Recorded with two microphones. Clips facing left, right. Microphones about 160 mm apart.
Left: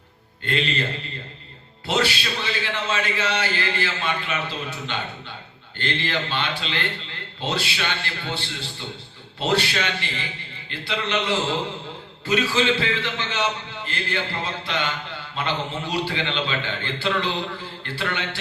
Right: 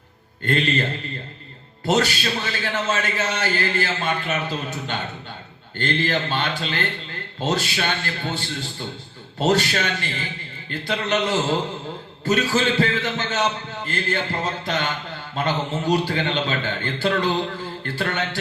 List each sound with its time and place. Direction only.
0.4 s a man's voice: 45° right (ahead or behind)
1.9 s a man's voice: 45° right (ahead or behind)